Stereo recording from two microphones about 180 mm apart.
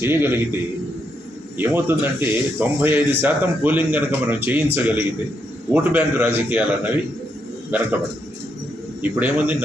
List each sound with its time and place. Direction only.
0.0 s speech: 10° right (ahead or behind)
1.5 s speech: 10° right (ahead or behind)
9.0 s speech: 10° right (ahead or behind)